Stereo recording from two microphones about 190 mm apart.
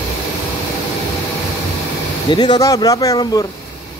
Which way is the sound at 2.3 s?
20° left (ahead or behind).